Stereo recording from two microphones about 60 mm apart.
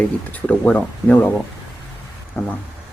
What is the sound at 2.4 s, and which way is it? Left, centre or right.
Speech, left.